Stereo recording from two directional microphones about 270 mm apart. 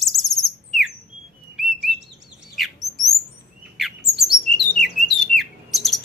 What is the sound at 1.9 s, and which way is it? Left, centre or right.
Chirp, centre.